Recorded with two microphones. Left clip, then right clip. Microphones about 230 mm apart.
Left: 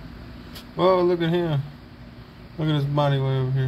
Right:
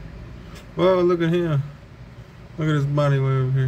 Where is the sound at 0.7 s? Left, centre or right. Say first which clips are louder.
Right 1 dB; centre.